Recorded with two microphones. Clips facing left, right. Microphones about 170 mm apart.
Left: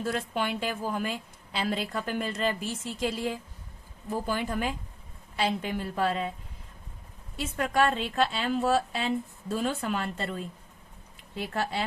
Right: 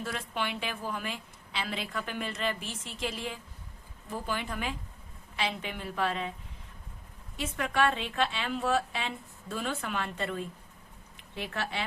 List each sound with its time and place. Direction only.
0.0 s a woman's voice: 40° left (ahead or behind)
7.6 s a woman's voice: 40° left (ahead or behind)
11.3 s a woman's voice: 40° left (ahead or behind)